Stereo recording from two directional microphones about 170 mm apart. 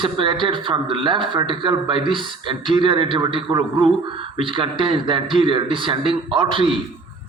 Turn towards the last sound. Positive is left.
turn(degrees=-30)  # may be behind; listen again after turning